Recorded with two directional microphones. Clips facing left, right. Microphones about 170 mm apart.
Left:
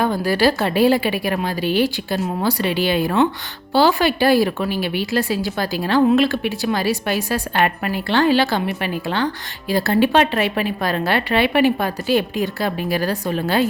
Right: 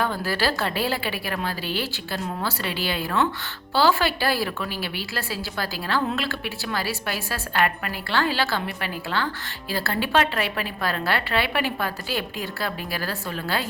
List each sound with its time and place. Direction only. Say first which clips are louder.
0.0 s a woman's voice: left 7 dB; 15° left (ahead or behind)